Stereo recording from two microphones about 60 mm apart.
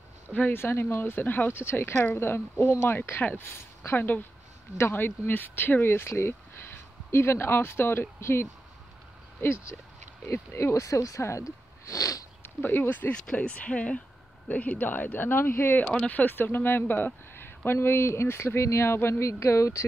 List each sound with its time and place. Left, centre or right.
0.5 s speech: left
12.6 s speech: left
13.1 s speech: centre; by 15.8 s left
15.8 s speech: centre
16.1 s speech: left